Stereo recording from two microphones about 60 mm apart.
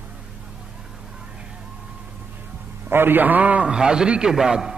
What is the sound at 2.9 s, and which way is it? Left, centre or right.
A man's voice, right.